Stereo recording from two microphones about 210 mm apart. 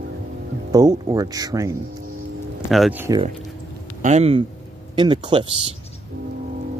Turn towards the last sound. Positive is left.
turn(degrees=-25)  # may be behind; listen again after turning